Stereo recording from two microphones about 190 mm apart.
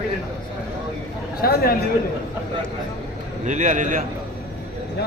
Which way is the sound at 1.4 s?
55° left (ahead or behind).